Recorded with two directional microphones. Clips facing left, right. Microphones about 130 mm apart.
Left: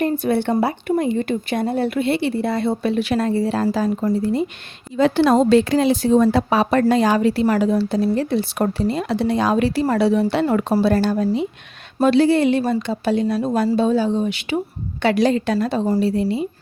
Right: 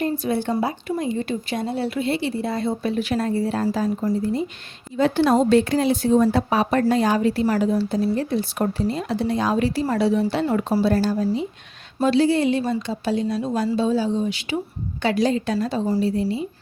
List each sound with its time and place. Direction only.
0.0 s speech: 60° left (ahead or behind)
4.9 s a woman's voice: 90° left; by 16.5 s 70° left (ahead or behind)